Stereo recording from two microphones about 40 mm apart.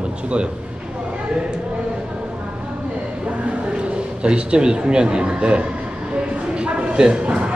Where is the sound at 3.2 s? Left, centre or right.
Right.